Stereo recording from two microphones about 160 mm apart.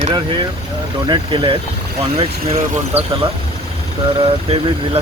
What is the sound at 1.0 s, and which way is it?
Speech, 30° right (ahead or behind).